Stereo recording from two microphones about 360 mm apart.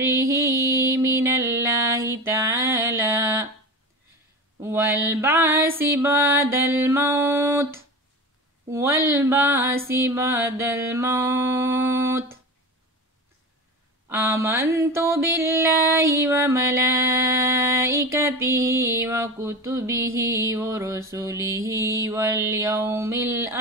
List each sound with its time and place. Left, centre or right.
0.1 s music: centre
4.6 s mantra: centre
14.0 s mantra: centre